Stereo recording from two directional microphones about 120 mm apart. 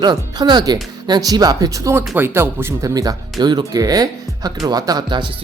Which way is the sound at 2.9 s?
30° right (ahead or behind).